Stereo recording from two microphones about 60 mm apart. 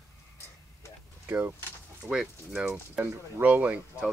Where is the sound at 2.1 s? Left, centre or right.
Centre.